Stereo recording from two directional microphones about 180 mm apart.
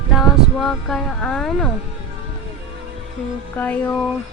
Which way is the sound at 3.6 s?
5° left (ahead or behind).